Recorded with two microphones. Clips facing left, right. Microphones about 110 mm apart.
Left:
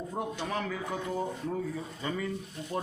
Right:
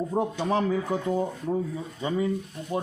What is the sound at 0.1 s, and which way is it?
Speech, 30° right (ahead or behind).